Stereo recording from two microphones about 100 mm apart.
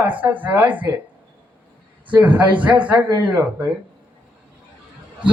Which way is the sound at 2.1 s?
15° right (ahead or behind).